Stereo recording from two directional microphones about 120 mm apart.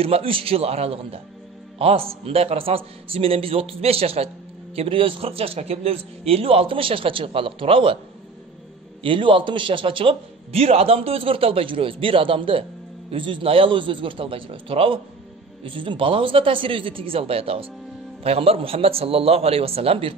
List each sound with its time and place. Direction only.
0.0 s a man's voice: 55° right (ahead or behind)
9.0 s a man's voice: 45° right (ahead or behind)